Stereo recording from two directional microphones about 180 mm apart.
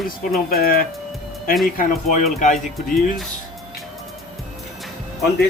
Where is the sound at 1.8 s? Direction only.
45° left (ahead or behind).